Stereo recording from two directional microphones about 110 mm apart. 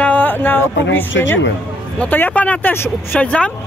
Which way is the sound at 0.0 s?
15° left (ahead or behind).